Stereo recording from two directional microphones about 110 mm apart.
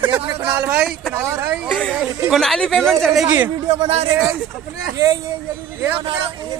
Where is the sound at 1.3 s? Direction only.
25° right (ahead or behind).